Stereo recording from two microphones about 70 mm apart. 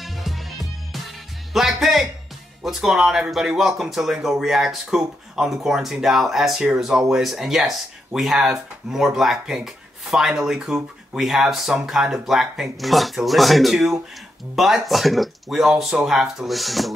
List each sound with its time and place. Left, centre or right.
0.0 s music: centre
1.5 s speech: centre